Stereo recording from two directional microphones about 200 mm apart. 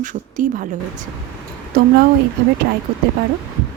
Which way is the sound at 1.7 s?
45° right (ahead or behind).